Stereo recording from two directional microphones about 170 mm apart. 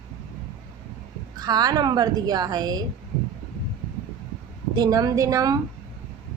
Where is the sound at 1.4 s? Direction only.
20° right (ahead or behind).